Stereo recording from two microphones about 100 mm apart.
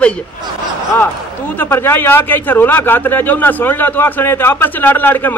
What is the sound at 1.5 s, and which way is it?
A man's voice, 20° left (ahead or behind).